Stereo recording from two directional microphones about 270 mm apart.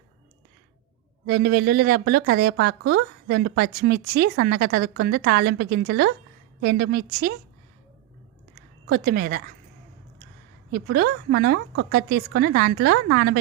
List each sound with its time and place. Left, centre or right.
1.3 s a woman's voice: right
8.9 s a woman's voice: right
10.7 s a woman's voice: right